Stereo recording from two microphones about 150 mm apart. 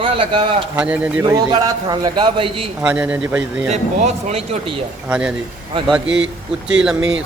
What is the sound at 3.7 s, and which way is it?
Speech, 45° right (ahead or behind).